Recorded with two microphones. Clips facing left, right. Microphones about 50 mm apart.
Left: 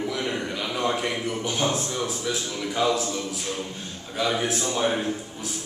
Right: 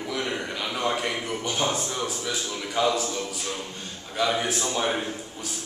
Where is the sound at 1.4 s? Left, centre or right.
Centre.